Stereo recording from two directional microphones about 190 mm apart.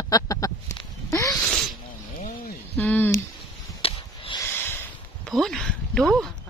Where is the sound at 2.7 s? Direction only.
10° left (ahead or behind).